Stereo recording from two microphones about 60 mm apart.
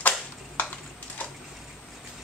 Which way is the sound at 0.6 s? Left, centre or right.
Left.